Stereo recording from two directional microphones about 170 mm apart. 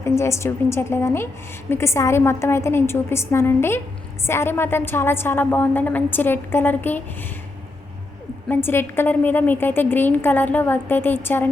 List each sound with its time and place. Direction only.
0.0 s a woman's voice: 15° left (ahead or behind)
8.4 s a woman's voice: 10° left (ahead or behind)